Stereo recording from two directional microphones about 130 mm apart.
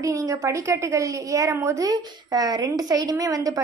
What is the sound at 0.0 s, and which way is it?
A woman's voice, 25° right (ahead or behind).